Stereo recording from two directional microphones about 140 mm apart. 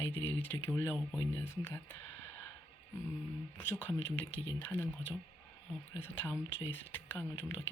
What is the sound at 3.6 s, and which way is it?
Speech, 15° left (ahead or behind).